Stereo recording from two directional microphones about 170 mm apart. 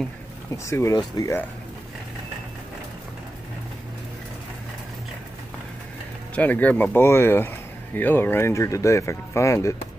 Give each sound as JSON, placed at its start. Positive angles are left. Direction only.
{"t": 0.7, "sound": "speech", "side_deg": 15}
{"t": 6.3, "sound": "speech", "side_deg": 10}